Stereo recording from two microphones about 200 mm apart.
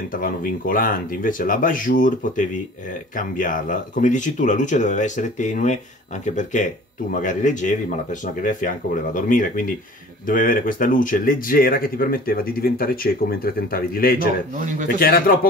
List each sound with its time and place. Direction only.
0.1 s speech: 45° left (ahead or behind)
14.5 s speech: 40° right (ahead or behind)
15.0 s speech: 50° left (ahead or behind)